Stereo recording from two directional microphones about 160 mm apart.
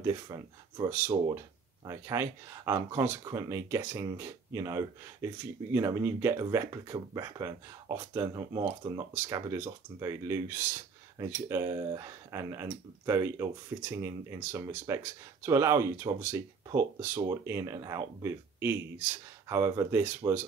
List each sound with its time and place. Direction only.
0.0 s speech: 20° right (ahead or behind)